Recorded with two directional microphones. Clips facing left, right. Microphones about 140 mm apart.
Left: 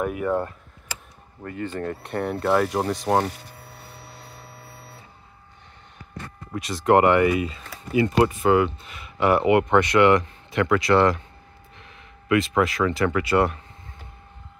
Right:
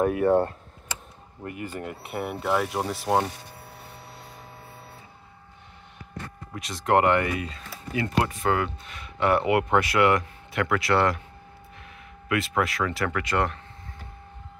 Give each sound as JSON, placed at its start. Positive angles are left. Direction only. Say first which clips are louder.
{"t": 0.0, "sound": "speech", "louder": "right 4 dB", "side_deg": -30}
{"t": 1.4, "sound": "speech", "louder": "left 4 dB", "side_deg": -15}
{"t": 6.5, "sound": "speech", "louder": "left 4 dB", "side_deg": 0}